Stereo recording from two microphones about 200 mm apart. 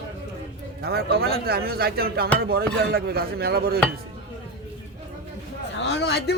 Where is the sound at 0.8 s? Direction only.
50° right (ahead or behind).